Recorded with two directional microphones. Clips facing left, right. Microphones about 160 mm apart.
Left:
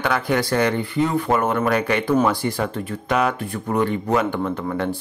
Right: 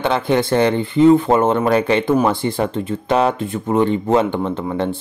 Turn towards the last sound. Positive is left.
turn(degrees=-25)  # may be behind; listen again after turning